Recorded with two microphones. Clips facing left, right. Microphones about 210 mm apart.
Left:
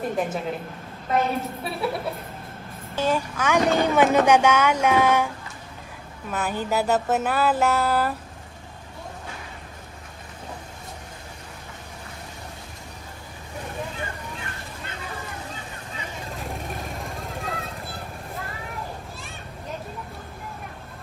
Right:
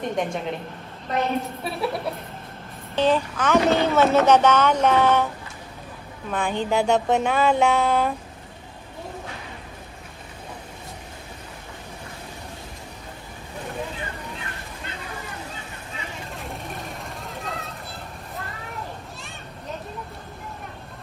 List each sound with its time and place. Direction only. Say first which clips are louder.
0.0 s speech: even; 5° left (ahead or behind)
6.3 s speech: right 2 dB; 5° left (ahead or behind)
16.4 s vehicle: left 2 dB; centre (ahead or behind)